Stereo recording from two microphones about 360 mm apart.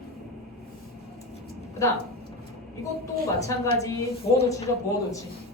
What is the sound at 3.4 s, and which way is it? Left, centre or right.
Speech, centre.